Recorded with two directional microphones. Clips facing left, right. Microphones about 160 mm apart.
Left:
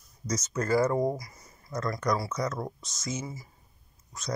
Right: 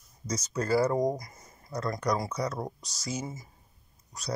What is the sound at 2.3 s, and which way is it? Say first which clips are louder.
Speech: left 1 dB; 30° right (ahead or behind).